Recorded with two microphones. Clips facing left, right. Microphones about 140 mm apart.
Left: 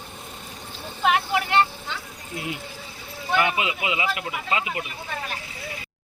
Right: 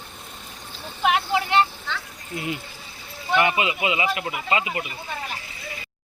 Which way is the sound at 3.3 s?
Centre (ahead or behind).